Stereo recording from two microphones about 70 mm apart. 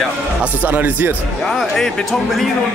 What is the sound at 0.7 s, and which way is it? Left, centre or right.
Speech, right.